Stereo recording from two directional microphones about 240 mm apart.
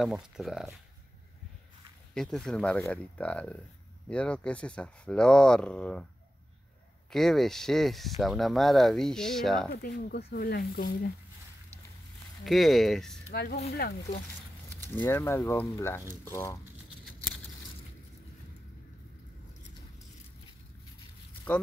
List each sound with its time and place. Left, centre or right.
0.0 s speech: centre
2.1 s speech: centre
7.1 s speech: centre
9.7 s speech: left
12.4 s speech: centre
13.3 s speech: left
14.8 s speech: centre